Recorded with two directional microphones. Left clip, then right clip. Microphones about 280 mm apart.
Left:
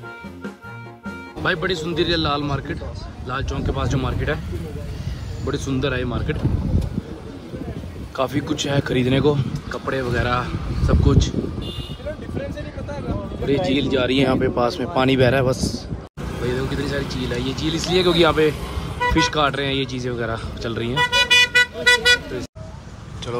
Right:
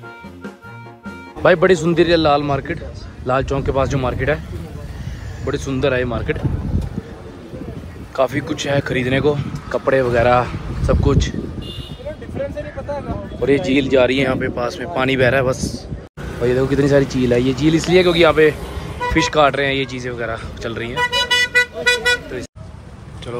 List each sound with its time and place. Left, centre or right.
1.0 s a man's voice: centre
5.4 s speech: centre
8.2 s speech: centre
13.4 s speech: centre
16.4 s speech: centre
21.0 s vehicle: centre